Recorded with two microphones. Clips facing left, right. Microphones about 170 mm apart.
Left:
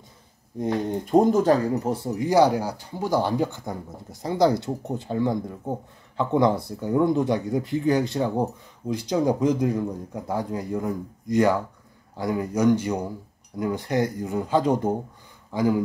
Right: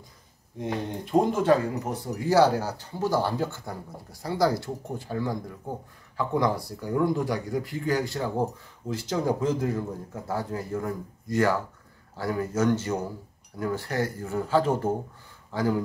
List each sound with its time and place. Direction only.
0.6 s speech: 40° left (ahead or behind)
2.1 s speech: 15° left (ahead or behind)